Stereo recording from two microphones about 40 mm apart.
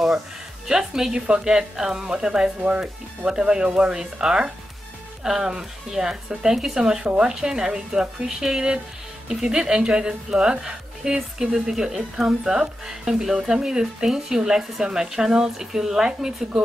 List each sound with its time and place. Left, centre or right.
0.7 s speech: centre
1.1 s speech: right
1.4 s speech: centre